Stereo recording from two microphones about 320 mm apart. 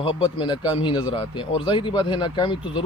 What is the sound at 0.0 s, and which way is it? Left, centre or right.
A man's voice, centre.